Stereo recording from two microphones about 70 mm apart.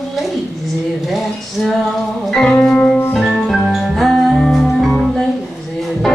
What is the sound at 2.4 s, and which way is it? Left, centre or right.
Music, centre.